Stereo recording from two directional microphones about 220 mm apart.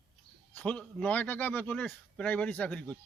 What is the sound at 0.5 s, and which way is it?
Speech, 5° left (ahead or behind).